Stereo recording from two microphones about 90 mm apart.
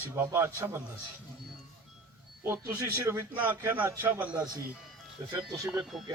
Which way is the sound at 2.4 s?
25° right (ahead or behind).